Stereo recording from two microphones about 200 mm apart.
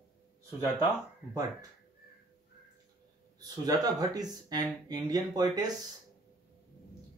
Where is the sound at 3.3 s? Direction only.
20° right (ahead or behind).